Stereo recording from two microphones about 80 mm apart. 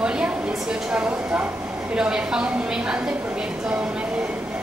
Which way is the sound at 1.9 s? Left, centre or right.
Centre.